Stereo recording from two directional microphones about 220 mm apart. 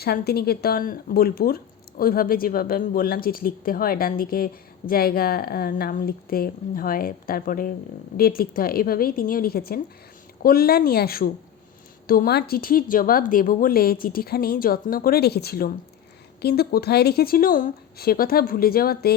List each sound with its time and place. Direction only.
0.0 s speech: 45° left (ahead or behind)